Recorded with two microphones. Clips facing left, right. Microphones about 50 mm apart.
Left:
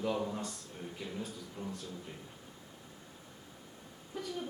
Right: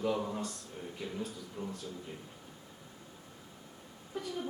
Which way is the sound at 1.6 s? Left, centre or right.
Right.